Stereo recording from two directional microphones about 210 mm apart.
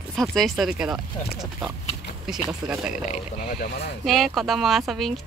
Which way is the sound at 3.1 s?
45° left (ahead or behind).